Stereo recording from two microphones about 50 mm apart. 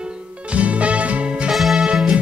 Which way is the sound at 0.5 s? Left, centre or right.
Right.